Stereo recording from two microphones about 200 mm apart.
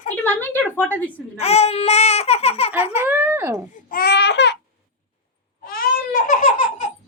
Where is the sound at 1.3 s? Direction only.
30° left (ahead or behind).